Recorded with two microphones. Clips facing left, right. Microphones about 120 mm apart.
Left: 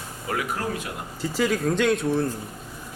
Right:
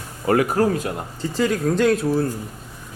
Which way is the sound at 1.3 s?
Centre (ahead or behind).